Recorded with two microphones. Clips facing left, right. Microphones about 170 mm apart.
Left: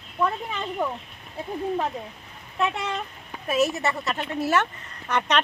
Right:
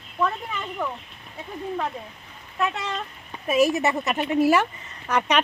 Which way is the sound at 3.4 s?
10° right (ahead or behind).